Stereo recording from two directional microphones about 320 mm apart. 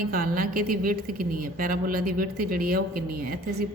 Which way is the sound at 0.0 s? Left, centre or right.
Right.